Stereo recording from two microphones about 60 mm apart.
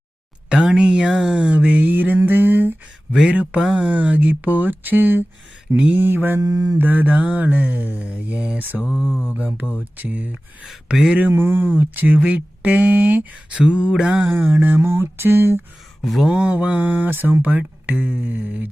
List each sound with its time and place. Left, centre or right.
0.5 s speech: centre; by 2.1 s right
2.2 s a sound: right
3.1 s speech: centre
3.8 s speech: right
5.7 s speech: right
6.0 s a sound: right
6.4 s mantra: right
6.7 s speech: right; by 9.0 s centre
9.2 s speech: right
10.8 s speech: centre
11.3 s speech: right; by 14.3 s centre
14.3 s a sound: right
16.0 s a sound: centre
16.3 s speech: centre